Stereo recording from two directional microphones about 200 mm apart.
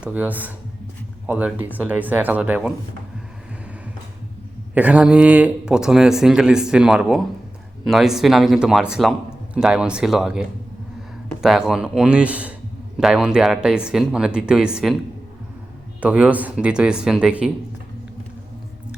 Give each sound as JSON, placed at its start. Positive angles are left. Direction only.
{"t": 0.0, "sound": "speech", "side_deg": -5}
{"t": 4.7, "sound": "speech", "side_deg": -5}
{"t": 16.0, "sound": "speech", "side_deg": -5}